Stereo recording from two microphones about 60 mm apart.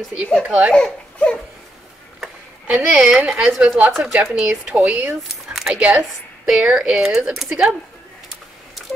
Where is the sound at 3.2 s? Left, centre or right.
Centre.